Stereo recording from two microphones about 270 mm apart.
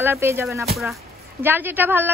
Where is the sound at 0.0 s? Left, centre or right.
Centre.